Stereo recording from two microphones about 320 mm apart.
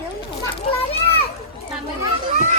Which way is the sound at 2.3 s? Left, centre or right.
Right.